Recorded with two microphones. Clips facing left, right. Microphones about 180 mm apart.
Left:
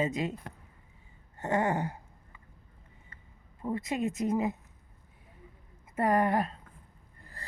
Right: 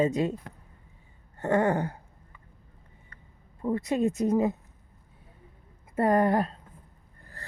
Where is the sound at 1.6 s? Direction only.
15° left (ahead or behind).